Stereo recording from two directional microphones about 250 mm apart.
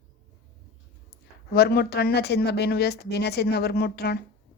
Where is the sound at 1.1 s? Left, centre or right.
Left.